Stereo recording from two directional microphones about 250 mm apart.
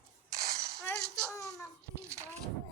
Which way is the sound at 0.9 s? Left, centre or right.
Centre.